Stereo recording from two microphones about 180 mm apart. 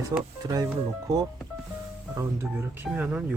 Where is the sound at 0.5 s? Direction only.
20° right (ahead or behind).